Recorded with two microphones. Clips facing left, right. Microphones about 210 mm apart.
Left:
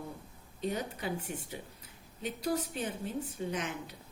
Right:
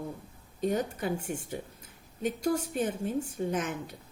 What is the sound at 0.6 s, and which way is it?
A woman's voice, 50° right (ahead or behind).